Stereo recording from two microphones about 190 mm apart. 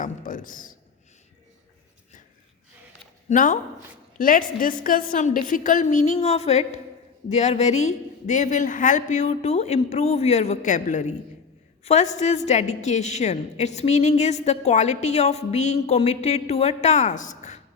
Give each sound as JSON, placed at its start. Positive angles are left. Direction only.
{"t": 0.0, "sound": "a man's voice", "side_deg": 45}
{"t": 3.2, "sound": "a woman's voice", "side_deg": 40}